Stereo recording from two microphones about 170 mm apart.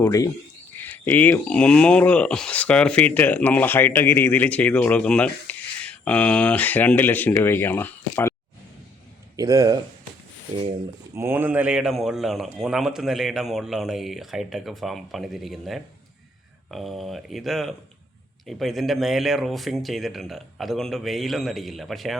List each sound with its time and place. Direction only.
0.0 s speech: 20° left (ahead or behind)
9.3 s speech: 20° right (ahead or behind)
11.1 s a man's voice: 15° right (ahead or behind)